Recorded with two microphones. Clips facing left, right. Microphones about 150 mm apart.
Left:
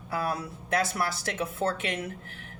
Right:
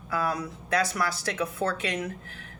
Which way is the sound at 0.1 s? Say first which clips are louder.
Right 2 dB; 25° left (ahead or behind).